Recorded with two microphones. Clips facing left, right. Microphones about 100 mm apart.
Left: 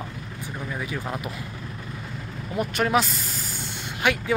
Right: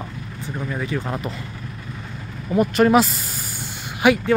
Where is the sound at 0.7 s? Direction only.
5° left (ahead or behind).